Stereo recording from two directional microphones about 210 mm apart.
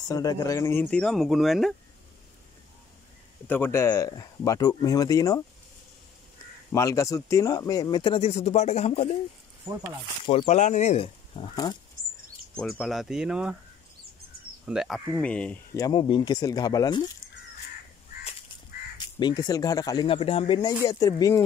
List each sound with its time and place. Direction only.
0.1 s speech: 15° left (ahead or behind); by 1.8 s centre (ahead or behind)
3.4 s speech: 10° left (ahead or behind)
6.7 s speech: 15° left (ahead or behind); by 9.1 s 30° left (ahead or behind)
10.2 s speech: 25° left (ahead or behind)
11.5 s speech: 20° left (ahead or behind)
12.5 s speech: 5° left (ahead or behind)
14.7 s speech: centre (ahead or behind); by 17.0 s 15° left (ahead or behind)
19.1 s speech: 20° left (ahead or behind)